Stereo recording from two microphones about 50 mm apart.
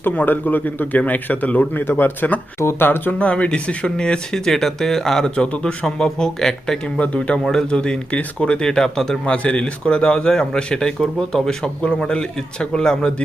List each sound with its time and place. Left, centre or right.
0.0 s a man's voice: left
2.6 s speech: left
2.8 s speech: left
3.2 s a man's voice: left
9.2 s a man's voice: left